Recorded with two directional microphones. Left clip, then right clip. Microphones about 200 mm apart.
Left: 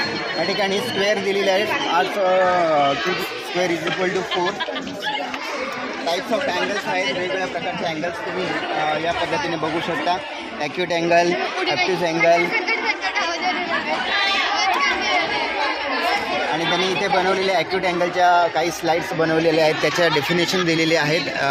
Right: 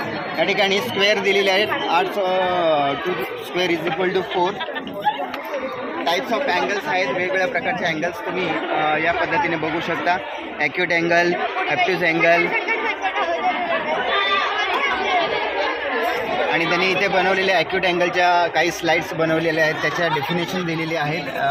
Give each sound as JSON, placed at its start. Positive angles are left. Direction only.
{"t": 0.9, "sound": "a man's voice", "side_deg": 20}
{"t": 6.1, "sound": "speech", "side_deg": 35}
{"t": 10.6, "sound": "a man's voice", "side_deg": 10}
{"t": 14.1, "sound": "chatter", "side_deg": -50}
{"t": 16.8, "sound": "a man's voice", "side_deg": 5}